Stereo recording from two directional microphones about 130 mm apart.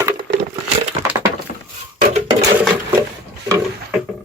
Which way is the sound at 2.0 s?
65° right (ahead or behind).